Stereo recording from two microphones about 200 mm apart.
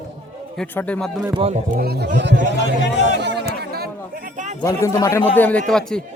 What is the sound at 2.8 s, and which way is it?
Speech, 60° left (ahead or behind).